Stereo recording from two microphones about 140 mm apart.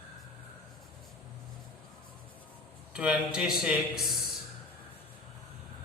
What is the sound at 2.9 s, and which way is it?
A man's voice, 10° right (ahead or behind).